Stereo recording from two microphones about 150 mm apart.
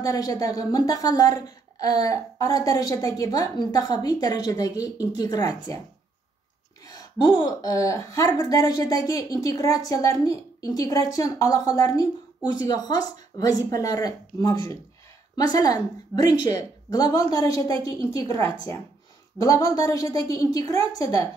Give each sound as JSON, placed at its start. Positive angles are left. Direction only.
{"t": 0.0, "sound": "a woman's voice", "side_deg": 25}
{"t": 6.9, "sound": "a woman's voice", "side_deg": 25}